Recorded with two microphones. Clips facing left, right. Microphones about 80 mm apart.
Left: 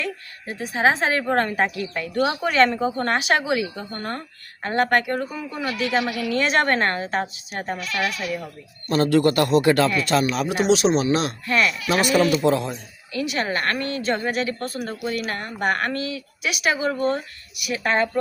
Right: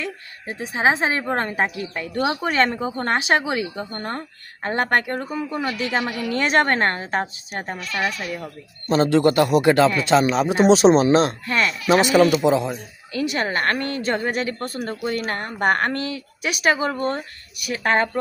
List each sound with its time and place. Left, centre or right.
0.0 s a woman's voice: right
2.4 s speech: right
7.9 s speech: centre
8.9 s a woman's voice: right
11.9 s a woman's voice: right
13.1 s speech: right